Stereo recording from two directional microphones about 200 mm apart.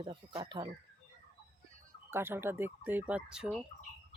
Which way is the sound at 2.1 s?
10° right (ahead or behind).